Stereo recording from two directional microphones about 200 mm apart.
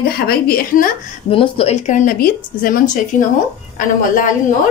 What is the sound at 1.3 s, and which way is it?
Speech, 30° left (ahead or behind).